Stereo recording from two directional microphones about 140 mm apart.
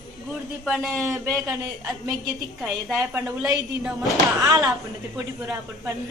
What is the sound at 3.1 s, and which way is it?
Speech, 20° right (ahead or behind).